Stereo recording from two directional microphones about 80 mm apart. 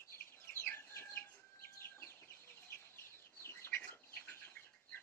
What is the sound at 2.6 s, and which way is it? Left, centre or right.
Bird, left.